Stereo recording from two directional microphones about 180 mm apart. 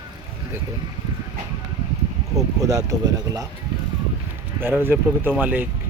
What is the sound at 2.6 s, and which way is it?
Speech, 20° right (ahead or behind).